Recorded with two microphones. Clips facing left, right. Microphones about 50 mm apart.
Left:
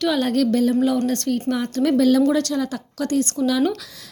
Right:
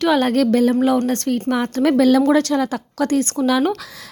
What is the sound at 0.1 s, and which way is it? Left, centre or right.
A woman's voice, right.